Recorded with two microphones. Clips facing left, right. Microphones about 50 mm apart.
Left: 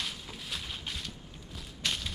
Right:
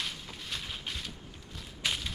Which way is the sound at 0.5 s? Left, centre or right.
Centre.